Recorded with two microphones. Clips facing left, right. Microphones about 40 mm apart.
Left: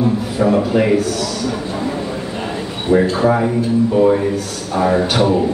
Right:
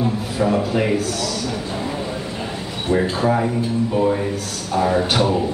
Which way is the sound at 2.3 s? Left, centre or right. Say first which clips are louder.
Left 4 dB; centre.